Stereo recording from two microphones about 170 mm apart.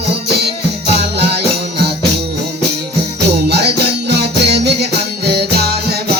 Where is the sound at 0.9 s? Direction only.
70° right (ahead or behind).